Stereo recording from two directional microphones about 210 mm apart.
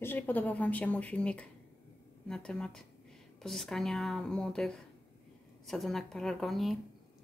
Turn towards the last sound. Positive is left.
turn(degrees=0)  # may be behind; listen again after turning